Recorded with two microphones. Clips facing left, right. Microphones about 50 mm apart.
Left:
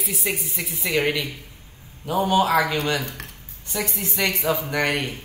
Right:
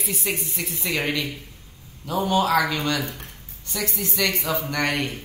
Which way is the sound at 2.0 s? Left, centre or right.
Centre.